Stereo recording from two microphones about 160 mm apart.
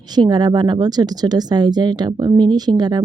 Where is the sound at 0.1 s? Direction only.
25° right (ahead or behind).